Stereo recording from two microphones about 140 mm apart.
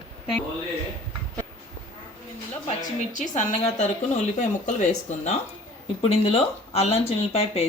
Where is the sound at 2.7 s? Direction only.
60° left (ahead or behind).